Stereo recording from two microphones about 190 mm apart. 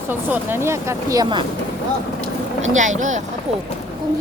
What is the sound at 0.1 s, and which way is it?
Speech, 10° right (ahead or behind).